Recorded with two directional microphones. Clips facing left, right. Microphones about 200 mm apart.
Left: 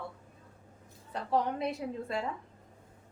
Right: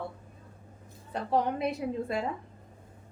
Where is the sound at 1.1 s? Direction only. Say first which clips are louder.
Right 2 dB; 15° right (ahead or behind).